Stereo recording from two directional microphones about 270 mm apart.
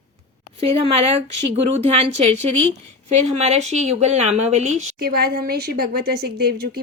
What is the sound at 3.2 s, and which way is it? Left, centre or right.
Speech, right.